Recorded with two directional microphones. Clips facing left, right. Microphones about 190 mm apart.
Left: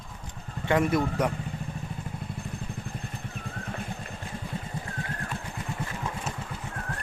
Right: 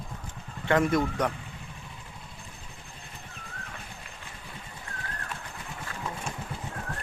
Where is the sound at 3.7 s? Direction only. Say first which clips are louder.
Left 8 dB; 45° left (ahead or behind).